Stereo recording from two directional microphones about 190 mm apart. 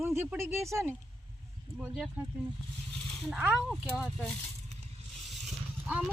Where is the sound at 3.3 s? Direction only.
5° right (ahead or behind).